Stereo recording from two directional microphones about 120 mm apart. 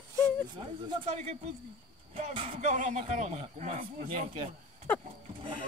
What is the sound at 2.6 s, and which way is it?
Speech, 85° right.